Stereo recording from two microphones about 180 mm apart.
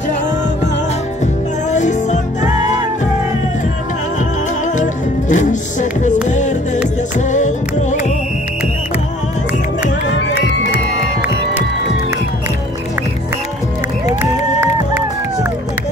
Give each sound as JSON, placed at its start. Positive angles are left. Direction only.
{"t": 1.2, "sound": "music", "side_deg": 40}
{"t": 5.3, "sound": "music", "side_deg": 45}
{"t": 14.2, "sound": "run", "side_deg": -10}